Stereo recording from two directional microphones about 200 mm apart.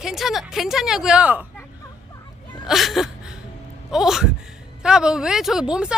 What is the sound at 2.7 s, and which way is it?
A woman's voice, centre (ahead or behind).